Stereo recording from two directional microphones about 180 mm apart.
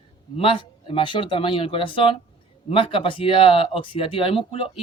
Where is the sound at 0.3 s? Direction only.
30° left (ahead or behind).